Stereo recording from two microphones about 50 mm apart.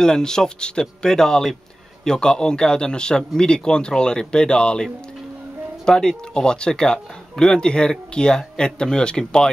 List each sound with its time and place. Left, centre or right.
0.0 s speech: centre
5.9 s speech: centre